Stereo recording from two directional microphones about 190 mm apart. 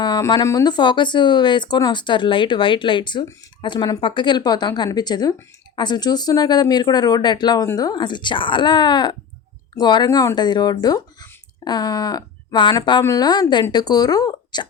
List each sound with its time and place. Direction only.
0.0 s speech: 20° left (ahead or behind)